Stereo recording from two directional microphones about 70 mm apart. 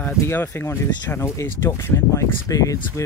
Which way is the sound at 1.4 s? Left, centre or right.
Left.